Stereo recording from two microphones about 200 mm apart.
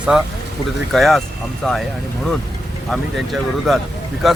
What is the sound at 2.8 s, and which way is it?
Speech, centre (ahead or behind).